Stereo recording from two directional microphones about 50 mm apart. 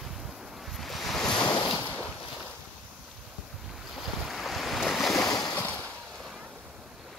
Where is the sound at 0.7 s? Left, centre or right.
Centre.